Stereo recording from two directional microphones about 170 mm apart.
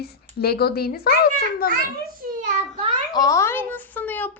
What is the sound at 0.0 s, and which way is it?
Speech, 70° left (ahead or behind).